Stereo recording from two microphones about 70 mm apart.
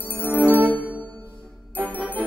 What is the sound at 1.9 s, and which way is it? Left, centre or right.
Music, left.